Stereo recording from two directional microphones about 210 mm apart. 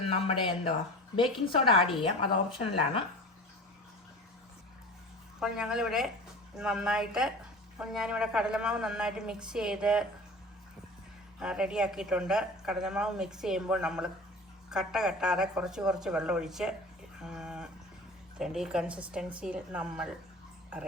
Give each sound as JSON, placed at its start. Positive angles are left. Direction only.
{"t": 0.0, "sound": "speech", "side_deg": 25}
{"t": 5.4, "sound": "a woman's voice", "side_deg": -5}
{"t": 11.3, "sound": "a woman's voice", "side_deg": -5}
{"t": 17.2, "sound": "a sound", "side_deg": -5}
{"t": 18.3, "sound": "a woman's voice", "side_deg": 0}